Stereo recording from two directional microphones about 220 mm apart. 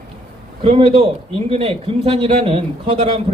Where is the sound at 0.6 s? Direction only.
25° right (ahead or behind).